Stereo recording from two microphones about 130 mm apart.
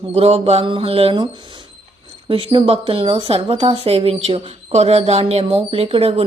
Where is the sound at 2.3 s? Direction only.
40° right (ahead or behind).